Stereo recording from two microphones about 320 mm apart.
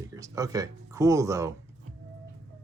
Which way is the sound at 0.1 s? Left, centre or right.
Centre.